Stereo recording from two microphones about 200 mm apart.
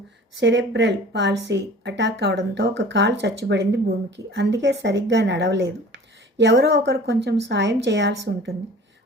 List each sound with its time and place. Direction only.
0.3 s speech: 65° right (ahead or behind)